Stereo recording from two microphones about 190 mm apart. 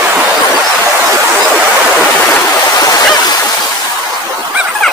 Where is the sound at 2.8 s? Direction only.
20° left (ahead or behind).